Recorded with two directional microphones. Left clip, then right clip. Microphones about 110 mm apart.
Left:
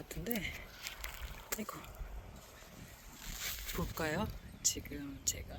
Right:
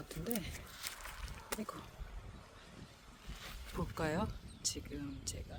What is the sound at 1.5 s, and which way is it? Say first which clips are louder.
Speech: even; 90° left.